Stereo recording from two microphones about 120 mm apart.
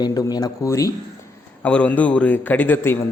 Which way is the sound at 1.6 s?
10° left (ahead or behind).